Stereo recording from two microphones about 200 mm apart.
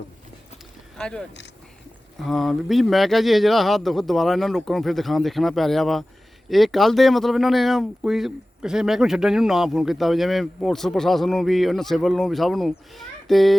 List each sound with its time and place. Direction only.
0.9 s speech: 5° left (ahead or behind)
2.2 s speech: centre (ahead or behind)